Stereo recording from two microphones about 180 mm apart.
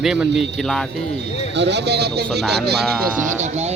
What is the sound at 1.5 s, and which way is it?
Speech, 75° right (ahead or behind).